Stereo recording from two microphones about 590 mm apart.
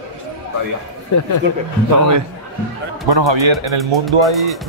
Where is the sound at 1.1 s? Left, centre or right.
Left.